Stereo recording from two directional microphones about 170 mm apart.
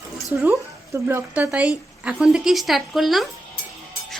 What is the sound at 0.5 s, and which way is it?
A woman's voice, 15° right (ahead or behind).